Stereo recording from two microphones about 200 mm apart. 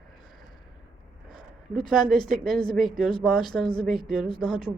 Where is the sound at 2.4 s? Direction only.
Centre (ahead or behind).